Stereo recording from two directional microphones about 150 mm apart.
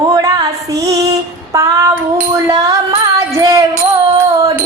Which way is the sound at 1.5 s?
20° right (ahead or behind).